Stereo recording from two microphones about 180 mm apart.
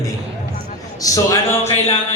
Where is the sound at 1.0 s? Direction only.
20° left (ahead or behind).